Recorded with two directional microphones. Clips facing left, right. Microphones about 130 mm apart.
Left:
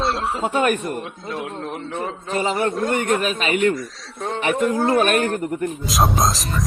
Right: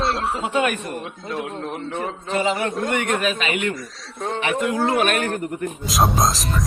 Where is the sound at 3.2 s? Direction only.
40° left (ahead or behind).